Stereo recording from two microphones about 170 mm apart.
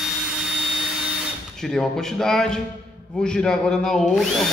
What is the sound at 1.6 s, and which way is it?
Speech, centre (ahead or behind).